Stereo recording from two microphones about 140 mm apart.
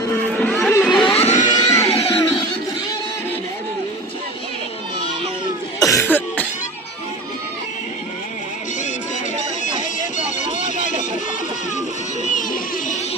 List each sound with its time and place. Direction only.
0.3 s a sound: 10° left (ahead or behind)
1.0 s music: 50° left (ahead or behind)
1.5 s music: 30° left (ahead or behind)
1.9 s music: 45° left (ahead or behind)
5.8 s cough: 25° left (ahead or behind)
6.1 s cough: 15° left (ahead or behind)
12.2 s a sound: 65° left (ahead or behind)